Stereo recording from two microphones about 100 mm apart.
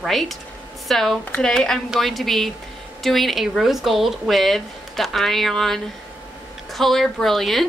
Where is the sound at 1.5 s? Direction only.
5° left (ahead or behind).